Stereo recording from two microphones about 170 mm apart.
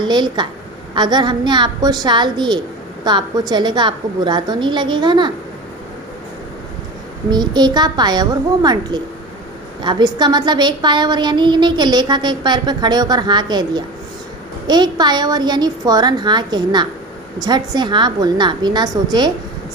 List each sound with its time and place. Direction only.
0.0 s a woman's voice: 25° right (ahead or behind)
7.3 s a woman's voice: 25° right (ahead or behind)